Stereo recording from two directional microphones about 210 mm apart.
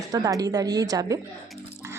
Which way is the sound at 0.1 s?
15° right (ahead or behind).